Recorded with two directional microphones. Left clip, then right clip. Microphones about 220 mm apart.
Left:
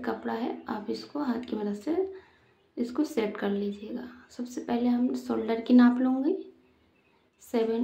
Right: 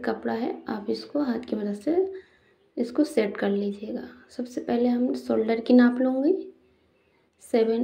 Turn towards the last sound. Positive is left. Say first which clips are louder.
# right 5 dB
turn(degrees=-15)  # may be behind; listen again after turning